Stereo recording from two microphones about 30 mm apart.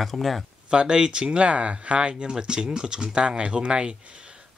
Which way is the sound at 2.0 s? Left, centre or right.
Right.